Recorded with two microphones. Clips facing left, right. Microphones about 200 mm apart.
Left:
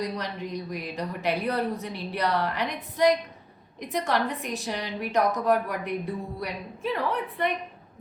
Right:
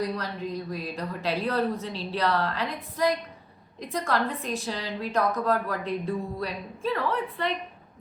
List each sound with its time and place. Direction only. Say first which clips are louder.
0.0 s a woman's voice: right 1 dB; 20° left (ahead or behind)